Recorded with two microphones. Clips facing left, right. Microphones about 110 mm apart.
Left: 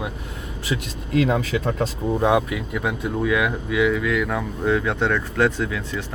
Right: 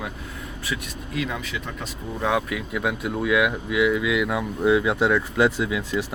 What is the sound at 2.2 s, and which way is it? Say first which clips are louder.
Speech: left 4 dB; 15° left (ahead or behind).